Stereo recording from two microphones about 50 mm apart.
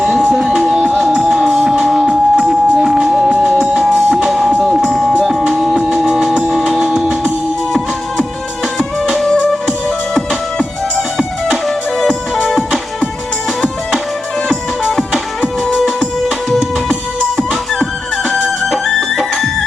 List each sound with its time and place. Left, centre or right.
0.0 s music: right
3.4 s music: right
3.9 s music: centre
4.3 s music: centre
9.1 s music: centre
11.2 s music: centre
11.9 s music: centre
16.5 s music: centre